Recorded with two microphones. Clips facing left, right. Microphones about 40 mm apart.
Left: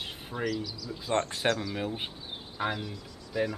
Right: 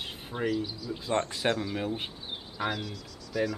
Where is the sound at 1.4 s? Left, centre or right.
Right.